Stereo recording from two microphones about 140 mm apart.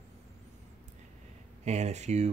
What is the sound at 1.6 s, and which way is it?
Speech, 55° right (ahead or behind).